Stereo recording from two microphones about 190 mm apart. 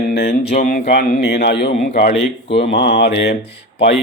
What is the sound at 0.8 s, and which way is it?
Speech, 60° left (ahead or behind).